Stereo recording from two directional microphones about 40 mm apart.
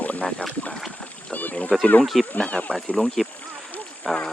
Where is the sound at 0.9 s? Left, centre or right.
Left.